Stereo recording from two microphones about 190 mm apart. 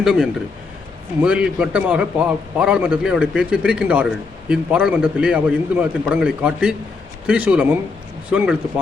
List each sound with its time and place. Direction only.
0.0 s a man's voice: 5° right (ahead or behind)